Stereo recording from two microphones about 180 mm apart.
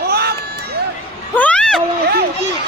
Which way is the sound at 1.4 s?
5° left (ahead or behind).